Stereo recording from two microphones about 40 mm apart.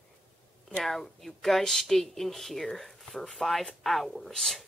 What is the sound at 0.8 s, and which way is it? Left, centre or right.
Speech, centre.